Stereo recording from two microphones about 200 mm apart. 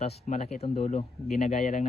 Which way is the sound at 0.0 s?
35° left (ahead or behind).